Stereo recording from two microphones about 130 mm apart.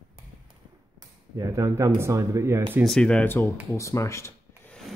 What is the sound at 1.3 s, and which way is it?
Speech, 25° right (ahead or behind).